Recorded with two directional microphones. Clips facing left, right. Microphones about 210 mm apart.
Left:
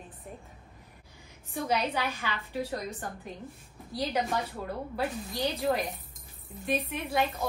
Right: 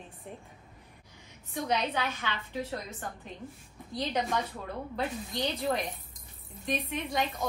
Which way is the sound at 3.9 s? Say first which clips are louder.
Left 1 dB; 5° left (ahead or behind).